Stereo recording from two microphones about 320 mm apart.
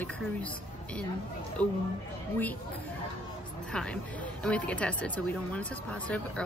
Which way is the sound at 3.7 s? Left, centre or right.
Centre.